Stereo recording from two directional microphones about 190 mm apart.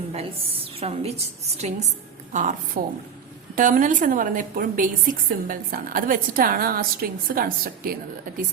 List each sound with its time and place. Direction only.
0.1 s a woman's voice: 30° right (ahead or behind); by 7.9 s 50° right (ahead or behind)